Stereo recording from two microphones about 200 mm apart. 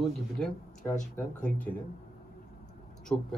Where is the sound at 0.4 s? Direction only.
5° left (ahead or behind).